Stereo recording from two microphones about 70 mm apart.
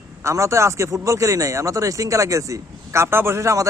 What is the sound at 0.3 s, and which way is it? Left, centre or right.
Speech, right.